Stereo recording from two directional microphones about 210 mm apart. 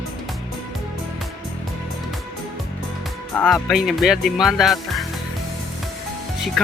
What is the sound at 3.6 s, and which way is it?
Speech, centre (ahead or behind).